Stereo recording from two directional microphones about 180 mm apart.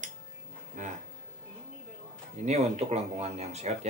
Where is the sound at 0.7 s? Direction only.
45° right (ahead or behind).